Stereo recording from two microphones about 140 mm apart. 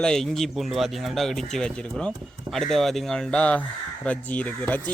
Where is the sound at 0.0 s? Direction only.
5° left (ahead or behind).